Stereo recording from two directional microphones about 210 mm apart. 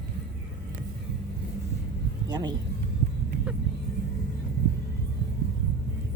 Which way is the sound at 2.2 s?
20° right (ahead or behind).